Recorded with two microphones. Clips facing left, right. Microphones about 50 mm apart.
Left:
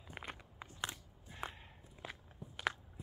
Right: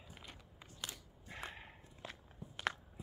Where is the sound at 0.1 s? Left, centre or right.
Left.